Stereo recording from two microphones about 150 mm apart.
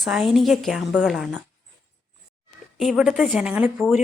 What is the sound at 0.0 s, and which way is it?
Speech, centre (ahead or behind).